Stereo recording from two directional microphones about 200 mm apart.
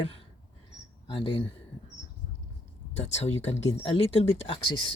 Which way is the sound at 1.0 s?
25° left (ahead or behind).